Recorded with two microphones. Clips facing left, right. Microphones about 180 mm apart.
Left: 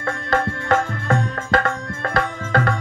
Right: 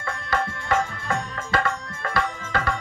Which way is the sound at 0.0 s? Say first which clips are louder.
Left 5 dB; 50° left (ahead or behind).